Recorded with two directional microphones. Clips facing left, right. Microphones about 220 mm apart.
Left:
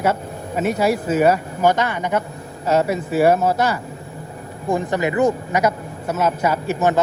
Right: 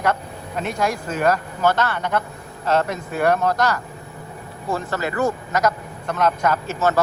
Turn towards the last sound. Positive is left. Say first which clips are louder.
# left 2 dB
turn(degrees=15)  # may be behind; listen again after turning